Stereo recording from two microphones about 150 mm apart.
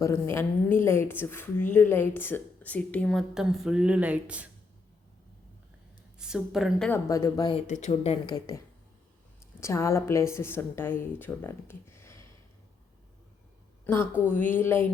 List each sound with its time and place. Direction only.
0.0 s a woman's voice: 20° left (ahead or behind); by 4.4 s 10° right (ahead or behind)
6.1 s a woman's voice: 5° right (ahead or behind)
6.9 s speech: 25° left (ahead or behind)
7.7 s speech: 45° left (ahead or behind)
8.3 s a woman's voice: 25° left (ahead or behind)
13.8 s a woman's voice: 15° left (ahead or behind)